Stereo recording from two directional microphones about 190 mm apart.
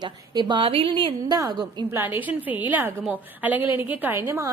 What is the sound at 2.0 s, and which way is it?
A woman's voice, 10° right (ahead or behind).